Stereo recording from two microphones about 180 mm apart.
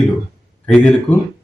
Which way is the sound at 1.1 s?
10° left (ahead or behind).